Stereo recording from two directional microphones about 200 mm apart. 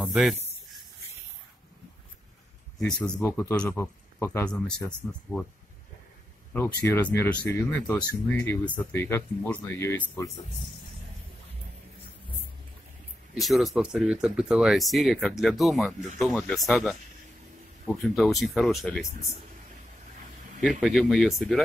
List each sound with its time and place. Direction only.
0.0 s speech: centre (ahead or behind)
2.9 s speech: 10° left (ahead or behind)
6.5 s speech: 10° left (ahead or behind)
13.3 s speech: centre (ahead or behind)
18.1 s speech: centre (ahead or behind)
20.8 s speech: centre (ahead or behind)